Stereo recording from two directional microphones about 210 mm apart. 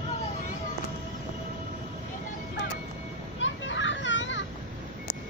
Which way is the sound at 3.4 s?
65° left (ahead or behind).